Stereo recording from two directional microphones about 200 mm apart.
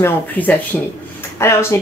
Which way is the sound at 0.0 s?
10° left (ahead or behind).